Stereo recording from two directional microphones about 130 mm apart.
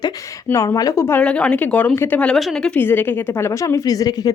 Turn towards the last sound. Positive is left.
turn(degrees=30)  # may be behind; listen again after turning